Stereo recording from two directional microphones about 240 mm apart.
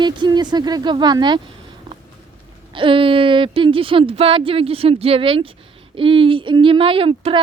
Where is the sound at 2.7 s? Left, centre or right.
Right.